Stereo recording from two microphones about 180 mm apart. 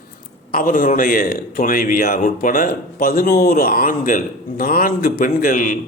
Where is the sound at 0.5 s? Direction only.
50° left (ahead or behind).